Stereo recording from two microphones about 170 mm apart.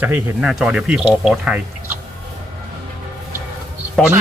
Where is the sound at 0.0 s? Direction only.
5° right (ahead or behind).